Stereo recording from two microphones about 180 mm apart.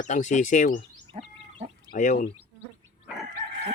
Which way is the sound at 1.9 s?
45° left (ahead or behind).